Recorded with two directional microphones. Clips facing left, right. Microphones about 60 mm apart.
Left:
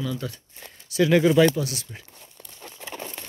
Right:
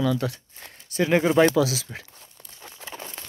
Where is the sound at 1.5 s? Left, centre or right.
Right.